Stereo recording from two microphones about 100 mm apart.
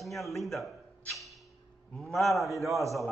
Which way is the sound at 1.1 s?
Centre (ahead or behind).